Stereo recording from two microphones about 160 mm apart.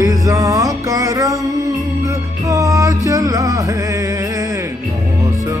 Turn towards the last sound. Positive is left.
turn(degrees=-20)  # may be behind; listen again after turning